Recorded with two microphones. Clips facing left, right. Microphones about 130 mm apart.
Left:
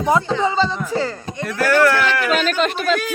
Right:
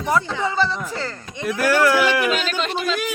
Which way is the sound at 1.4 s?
10° right (ahead or behind).